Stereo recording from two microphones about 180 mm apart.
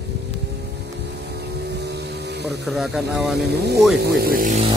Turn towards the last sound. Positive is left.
turn(degrees=-45)  # may be behind; listen again after turning